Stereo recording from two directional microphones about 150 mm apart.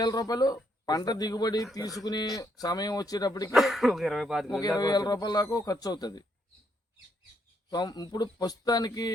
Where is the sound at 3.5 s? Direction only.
Centre (ahead or behind).